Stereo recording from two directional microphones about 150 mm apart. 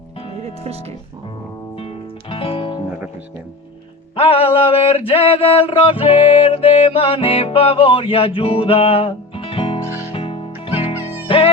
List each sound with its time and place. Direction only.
0.4 s speech: 45° right (ahead or behind)
1.7 s music: 40° left (ahead or behind)
4.1 s a sound: 40° left (ahead or behind)
10.1 s music: 40° left (ahead or behind)